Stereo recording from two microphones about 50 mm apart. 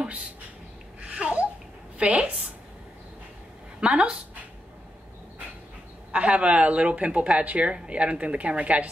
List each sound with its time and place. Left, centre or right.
1.1 s babbling: right
2.0 s a woman's voice: right
3.8 s speech: centre
6.1 s speech: right